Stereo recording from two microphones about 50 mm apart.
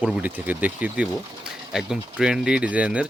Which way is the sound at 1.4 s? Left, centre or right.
Centre.